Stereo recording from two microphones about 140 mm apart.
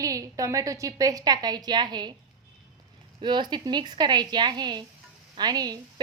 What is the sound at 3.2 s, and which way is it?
A woman's voice, 35° right (ahead or behind).